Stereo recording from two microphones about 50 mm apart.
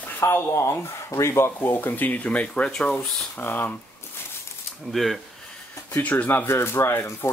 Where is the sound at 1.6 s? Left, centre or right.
Left; by 2.9 s centre.